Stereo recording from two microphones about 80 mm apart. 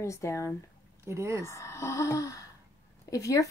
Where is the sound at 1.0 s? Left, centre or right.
Right.